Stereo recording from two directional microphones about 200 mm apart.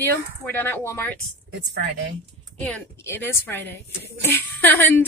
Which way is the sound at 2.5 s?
5° left (ahead or behind).